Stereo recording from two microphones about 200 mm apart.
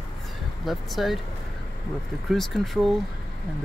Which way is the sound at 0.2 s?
Centre (ahead or behind).